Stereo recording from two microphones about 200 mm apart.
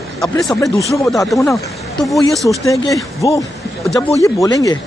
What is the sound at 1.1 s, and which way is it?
Speech, centre (ahead or behind).